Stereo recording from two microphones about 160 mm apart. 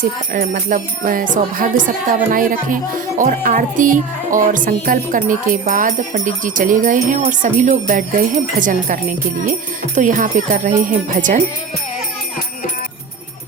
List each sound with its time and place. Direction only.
0.0 s speech: 60° right (ahead or behind)
9.5 s jingle bell: 50° right (ahead or behind)